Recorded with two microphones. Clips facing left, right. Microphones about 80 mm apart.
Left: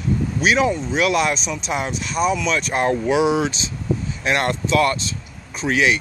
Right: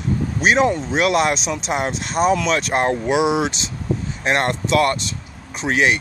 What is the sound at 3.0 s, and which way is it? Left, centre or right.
Speech, centre.